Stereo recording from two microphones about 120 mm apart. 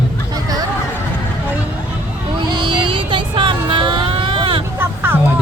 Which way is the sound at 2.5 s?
40° right (ahead or behind).